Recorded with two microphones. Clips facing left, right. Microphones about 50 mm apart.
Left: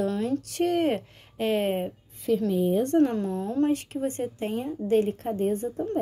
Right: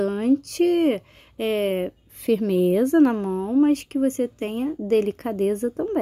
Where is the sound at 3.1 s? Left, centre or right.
Right.